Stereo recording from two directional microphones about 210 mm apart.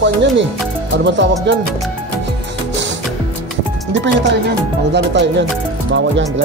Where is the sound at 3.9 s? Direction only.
60° right (ahead or behind).